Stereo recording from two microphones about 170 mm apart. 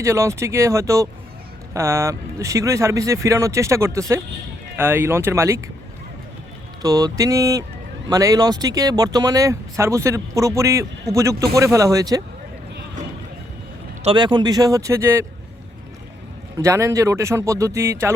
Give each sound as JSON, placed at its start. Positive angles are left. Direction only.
{"t": 0.0, "sound": "speech", "side_deg": -15}
{"t": 6.8, "sound": "speech", "side_deg": -20}
{"t": 14.0, "sound": "speech", "side_deg": -30}
{"t": 16.6, "sound": "speech", "side_deg": -15}